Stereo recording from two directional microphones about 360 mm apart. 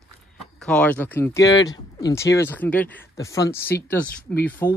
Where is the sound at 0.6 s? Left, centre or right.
Centre.